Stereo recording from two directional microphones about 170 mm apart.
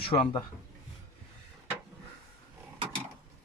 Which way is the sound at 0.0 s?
30° left (ahead or behind).